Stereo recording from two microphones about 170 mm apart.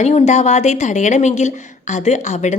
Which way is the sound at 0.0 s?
40° left (ahead or behind).